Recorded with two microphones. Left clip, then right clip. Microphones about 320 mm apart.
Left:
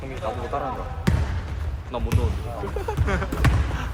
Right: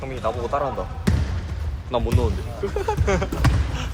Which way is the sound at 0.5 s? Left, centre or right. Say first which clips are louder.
Right 5 dB; right.